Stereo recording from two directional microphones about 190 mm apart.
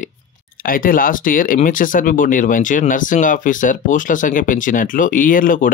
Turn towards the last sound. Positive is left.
turn(degrees=45)  # may be behind; listen again after turning